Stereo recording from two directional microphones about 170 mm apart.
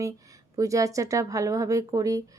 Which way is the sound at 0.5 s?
20° right (ahead or behind).